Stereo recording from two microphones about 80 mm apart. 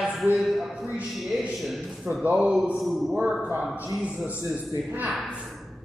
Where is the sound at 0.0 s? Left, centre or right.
Centre.